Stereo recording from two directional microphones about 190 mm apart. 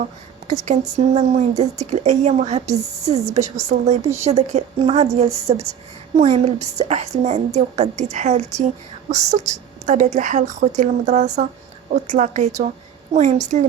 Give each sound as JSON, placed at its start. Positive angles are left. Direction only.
{"t": 0.4, "sound": "speech", "side_deg": -40}
{"t": 9.8, "sound": "speech", "side_deg": -40}